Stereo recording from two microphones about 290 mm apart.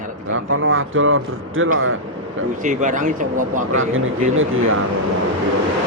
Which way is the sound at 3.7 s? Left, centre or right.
Right.